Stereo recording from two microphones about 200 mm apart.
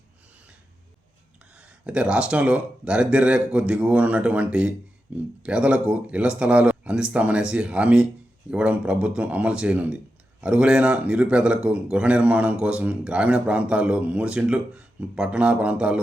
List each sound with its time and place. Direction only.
1.5 s a man's voice: 5° right (ahead or behind)